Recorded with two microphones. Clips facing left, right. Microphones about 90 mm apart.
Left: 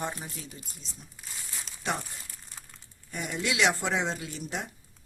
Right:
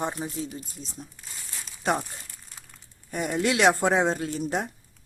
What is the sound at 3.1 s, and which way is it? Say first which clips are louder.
Speech: right 7 dB; 50° right (ahead or behind).